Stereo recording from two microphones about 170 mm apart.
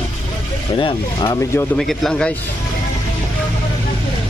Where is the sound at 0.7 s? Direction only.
25° left (ahead or behind).